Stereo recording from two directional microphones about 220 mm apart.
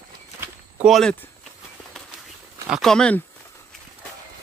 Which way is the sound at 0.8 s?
Centre (ahead or behind).